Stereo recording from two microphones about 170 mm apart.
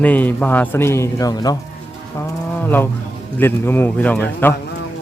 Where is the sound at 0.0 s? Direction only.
10° left (ahead or behind).